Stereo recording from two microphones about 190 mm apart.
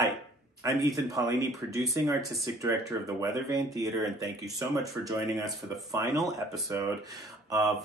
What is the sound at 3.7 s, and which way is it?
Speech, 20° right (ahead or behind).